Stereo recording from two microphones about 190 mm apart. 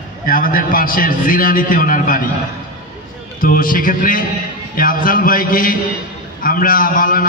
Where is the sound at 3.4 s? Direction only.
50° left (ahead or behind).